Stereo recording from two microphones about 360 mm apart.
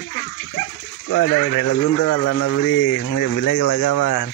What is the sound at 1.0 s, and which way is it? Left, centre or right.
Speech, left.